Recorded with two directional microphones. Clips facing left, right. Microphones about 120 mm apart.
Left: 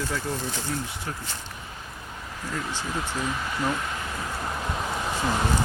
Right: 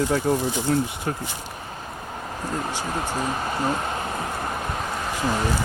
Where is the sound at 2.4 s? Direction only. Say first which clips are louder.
Right 3 dB; 45° right (ahead or behind).